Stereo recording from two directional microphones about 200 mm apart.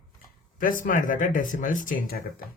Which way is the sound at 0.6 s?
45° left (ahead or behind).